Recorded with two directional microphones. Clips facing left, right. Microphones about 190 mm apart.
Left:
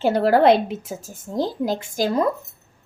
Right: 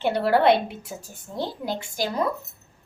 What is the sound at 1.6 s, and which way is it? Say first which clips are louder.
Speech: left 6 dB; 90° left.